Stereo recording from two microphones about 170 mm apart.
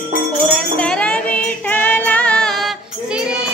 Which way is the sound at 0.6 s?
5° left (ahead or behind).